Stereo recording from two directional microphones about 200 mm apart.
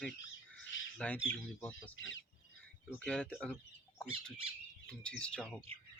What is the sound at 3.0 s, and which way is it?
Speech, 5° left (ahead or behind).